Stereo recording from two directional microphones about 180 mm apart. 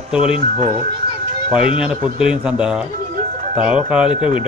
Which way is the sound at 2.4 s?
5° right (ahead or behind).